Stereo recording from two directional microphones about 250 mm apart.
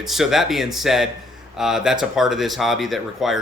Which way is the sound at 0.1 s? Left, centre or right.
Centre.